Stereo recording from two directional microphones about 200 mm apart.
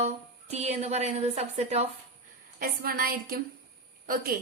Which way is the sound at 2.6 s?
45° right (ahead or behind).